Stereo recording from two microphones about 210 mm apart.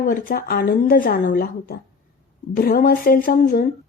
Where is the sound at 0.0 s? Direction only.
40° left (ahead or behind).